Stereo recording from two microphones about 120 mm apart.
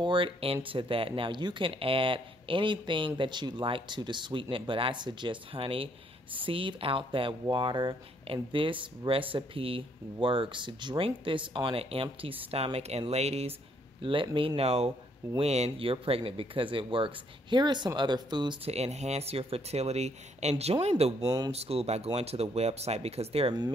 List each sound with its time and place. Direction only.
0.0 s speech: 45° right (ahead or behind); by 13.5 s 60° right (ahead or behind)
14.0 s speech: 45° right (ahead or behind)
18.6 s speech: 60° right (ahead or behind)
21.2 s speech: 30° right (ahead or behind)
21.5 s speech: 55° right (ahead or behind)